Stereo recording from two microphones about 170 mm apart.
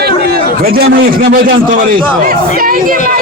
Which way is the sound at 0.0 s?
65° right (ahead or behind).